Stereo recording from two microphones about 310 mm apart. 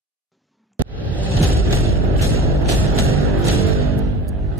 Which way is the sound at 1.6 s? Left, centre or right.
Right.